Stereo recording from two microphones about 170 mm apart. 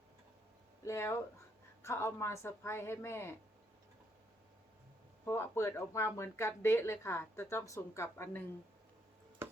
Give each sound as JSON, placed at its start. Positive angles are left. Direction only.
{"t": 0.9, "sound": "speech", "side_deg": 15}
{"t": 5.2, "sound": "speech", "side_deg": 15}